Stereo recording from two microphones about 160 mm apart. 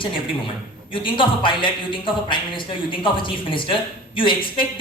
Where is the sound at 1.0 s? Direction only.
30° left (ahead or behind).